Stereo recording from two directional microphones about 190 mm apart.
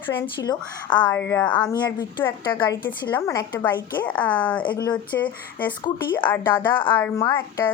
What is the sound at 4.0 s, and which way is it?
Speech, 5° left (ahead or behind).